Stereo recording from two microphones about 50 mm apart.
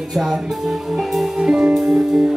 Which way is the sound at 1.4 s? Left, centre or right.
Centre.